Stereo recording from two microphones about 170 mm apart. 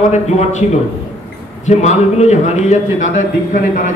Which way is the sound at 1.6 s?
40° left (ahead or behind).